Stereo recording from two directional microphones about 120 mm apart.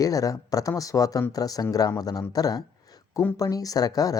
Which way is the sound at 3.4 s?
30° left (ahead or behind).